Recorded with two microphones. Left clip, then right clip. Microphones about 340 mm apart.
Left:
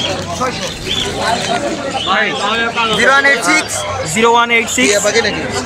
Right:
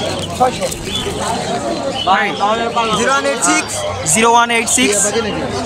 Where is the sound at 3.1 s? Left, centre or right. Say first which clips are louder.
Left 4 dB; centre.